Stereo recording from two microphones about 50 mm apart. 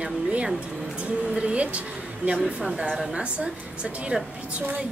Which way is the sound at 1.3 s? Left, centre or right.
Right.